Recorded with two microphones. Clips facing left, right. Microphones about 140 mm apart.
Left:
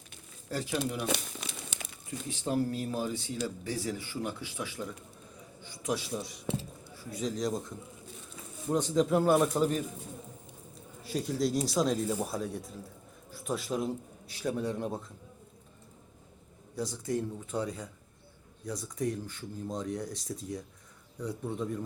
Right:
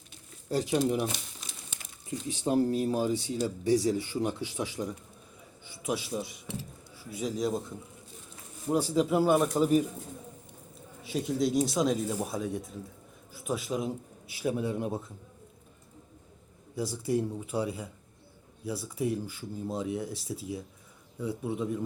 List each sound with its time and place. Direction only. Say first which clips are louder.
0.4 s speech: right 6 dB; 20° right (ahead or behind)
1.0 s crumpling: left 1 dB; 70° left (ahead or behind)
2.3 s speech: right 4 dB; 10° right (ahead or behind)
2.6 s speech: right 6 dB; 25° right (ahead or behind)
5.7 s a man's voice: right 1 dB; 5° right (ahead or behind)
8.7 s speech: right 1 dB; 10° right (ahead or behind)
11.0 s a man's voice: right 2 dB; centre (ahead or behind)
16.7 s speech: right 3 dB; 5° right (ahead or behind)